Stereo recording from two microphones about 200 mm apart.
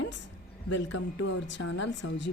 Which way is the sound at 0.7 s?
65° left (ahead or behind).